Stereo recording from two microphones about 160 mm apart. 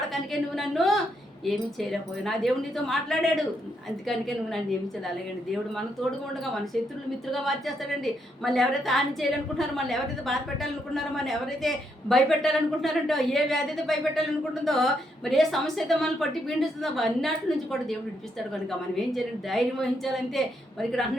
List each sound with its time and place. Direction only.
0.1 s a woman's voice: centre (ahead or behind)
7.3 s a woman's voice: centre (ahead or behind)
18.9 s a woman's voice: centre (ahead or behind)